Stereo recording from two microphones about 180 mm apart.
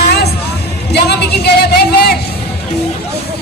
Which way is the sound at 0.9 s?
65° left (ahead or behind).